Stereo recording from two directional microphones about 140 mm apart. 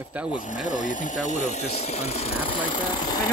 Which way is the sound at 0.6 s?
65° left (ahead or behind).